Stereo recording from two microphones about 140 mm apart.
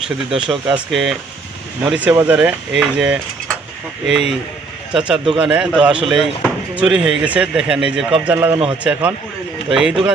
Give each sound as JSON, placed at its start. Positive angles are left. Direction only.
{"t": 0.3, "sound": "speech", "side_deg": -35}
{"t": 0.7, "sound": "speech", "side_deg": 0}